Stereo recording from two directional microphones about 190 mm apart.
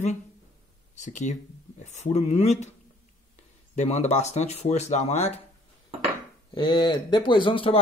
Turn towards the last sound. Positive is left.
turn(degrees=25)  # may be behind; listen again after turning